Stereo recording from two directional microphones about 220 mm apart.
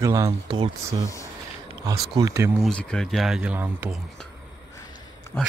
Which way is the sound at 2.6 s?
5° left (ahead or behind).